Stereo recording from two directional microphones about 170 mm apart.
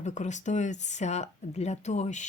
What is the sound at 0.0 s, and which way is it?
Speech, 45° left (ahead or behind).